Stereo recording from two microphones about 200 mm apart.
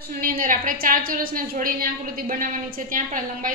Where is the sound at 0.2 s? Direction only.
45° right (ahead or behind).